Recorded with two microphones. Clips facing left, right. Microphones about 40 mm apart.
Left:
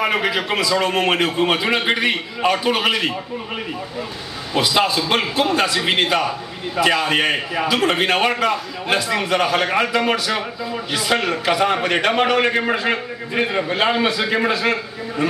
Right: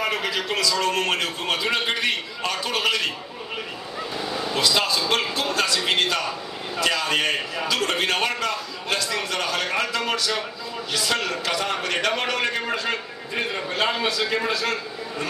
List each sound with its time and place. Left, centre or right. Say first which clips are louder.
0.0 s a man's voice: left 6 dB; left
4.6 s a man's voice: left 5 dB; centre